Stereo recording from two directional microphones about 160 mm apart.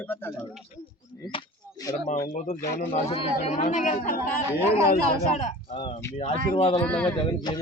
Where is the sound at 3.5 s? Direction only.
50° left (ahead or behind).